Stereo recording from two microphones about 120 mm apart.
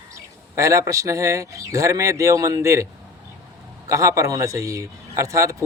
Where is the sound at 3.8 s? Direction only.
25° right (ahead or behind).